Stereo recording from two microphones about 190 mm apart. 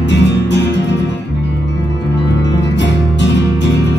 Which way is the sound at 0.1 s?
65° left (ahead or behind).